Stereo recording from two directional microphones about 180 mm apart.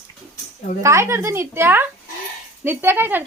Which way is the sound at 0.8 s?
15° right (ahead or behind).